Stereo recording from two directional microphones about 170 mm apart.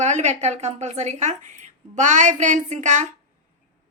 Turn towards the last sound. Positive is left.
turn(degrees=-45)  # may be behind; listen again after turning